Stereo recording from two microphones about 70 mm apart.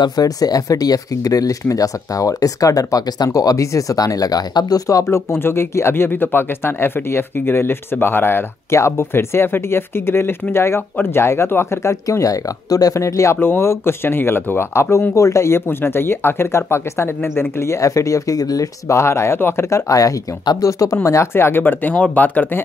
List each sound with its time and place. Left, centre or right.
0.0 s speech: left
5.0 s speech: left
13.4 s speech: left
19.9 s speech: left